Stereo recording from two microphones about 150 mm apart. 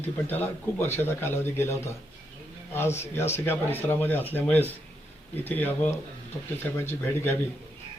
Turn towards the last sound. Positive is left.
turn(degrees=15)  # may be behind; listen again after turning